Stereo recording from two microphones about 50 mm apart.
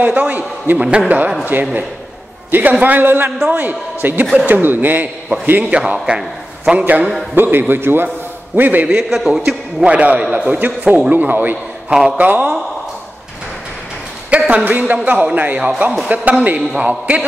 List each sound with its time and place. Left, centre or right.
0.0 s a man's voice: right
5.7 s a man's voice: right
6.8 s a man's voice: right
8.8 s a man's voice: centre
9.8 s a man's voice: right
10.6 s a man's voice: right
14.5 s a man's voice: right